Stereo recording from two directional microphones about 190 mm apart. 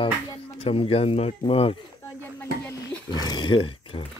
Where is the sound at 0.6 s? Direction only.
30° left (ahead or behind).